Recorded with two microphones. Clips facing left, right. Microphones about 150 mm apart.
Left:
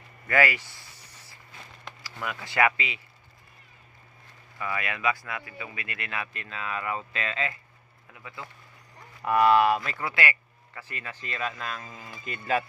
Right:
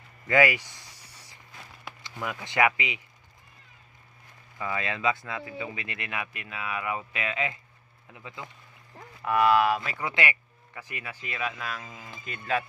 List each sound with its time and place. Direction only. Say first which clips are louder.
0.3 s a sound: right 2 dB; 20° right (ahead or behind)
2.0 s speech: right 1 dB; 20° right (ahead or behind)
4.5 s speech: right 1 dB; 20° right (ahead or behind)
9.2 s speech: left 2 dB; centre (ahead or behind)
9.9 s speech: even; 20° right (ahead or behind); by 12.6 s centre (ahead or behind)